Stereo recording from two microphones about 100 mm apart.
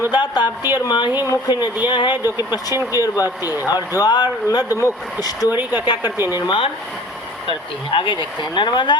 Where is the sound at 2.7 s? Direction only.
25° right (ahead or behind).